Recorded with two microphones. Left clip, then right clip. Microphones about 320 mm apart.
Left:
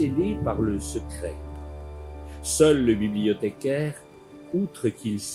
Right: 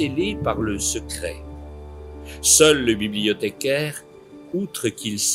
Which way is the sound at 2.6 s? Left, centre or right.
Right.